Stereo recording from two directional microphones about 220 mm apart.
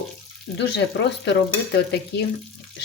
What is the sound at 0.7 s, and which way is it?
Speech, 50° left (ahead or behind).